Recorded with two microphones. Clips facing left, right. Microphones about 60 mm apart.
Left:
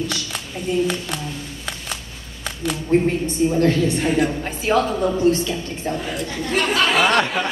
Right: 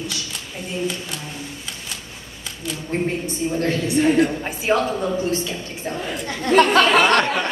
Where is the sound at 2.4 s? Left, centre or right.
Left.